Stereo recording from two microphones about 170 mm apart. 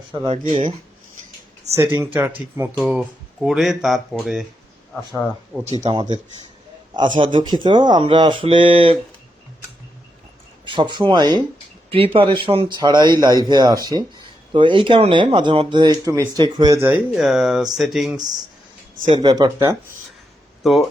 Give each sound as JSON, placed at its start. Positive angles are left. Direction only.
{"t": 0.3, "sound": "speech", "side_deg": -30}
{"t": 1.7, "sound": "speech", "side_deg": -15}
{"t": 5.8, "sound": "a man's voice", "side_deg": -25}
{"t": 10.7, "sound": "a man's voice", "side_deg": -25}
{"t": 19.1, "sound": "a man's voice", "side_deg": -25}